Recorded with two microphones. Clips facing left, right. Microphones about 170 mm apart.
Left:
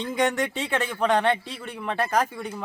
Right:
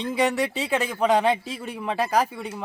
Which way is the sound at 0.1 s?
5° right (ahead or behind).